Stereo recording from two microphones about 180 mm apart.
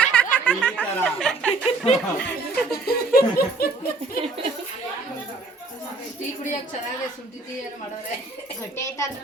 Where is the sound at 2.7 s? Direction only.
60° left (ahead or behind).